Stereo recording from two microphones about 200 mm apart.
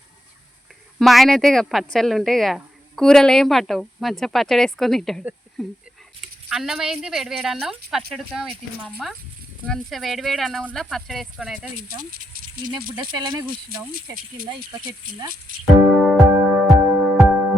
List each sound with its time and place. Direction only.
0.9 s a woman's voice: centre (ahead or behind)
11.8 s speech: 45° right (ahead or behind)
16.0 s music: centre (ahead or behind)